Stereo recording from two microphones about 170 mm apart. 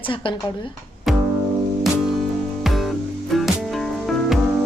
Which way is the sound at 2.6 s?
Centre (ahead or behind).